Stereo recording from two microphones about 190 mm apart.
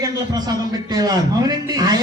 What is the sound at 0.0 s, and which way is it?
A man's voice, 20° right (ahead or behind).